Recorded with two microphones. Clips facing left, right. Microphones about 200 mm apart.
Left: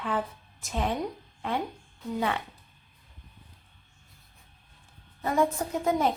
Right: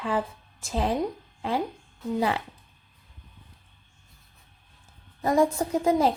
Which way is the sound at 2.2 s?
30° right (ahead or behind).